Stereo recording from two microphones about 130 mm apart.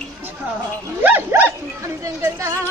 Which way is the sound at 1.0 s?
15° right (ahead or behind).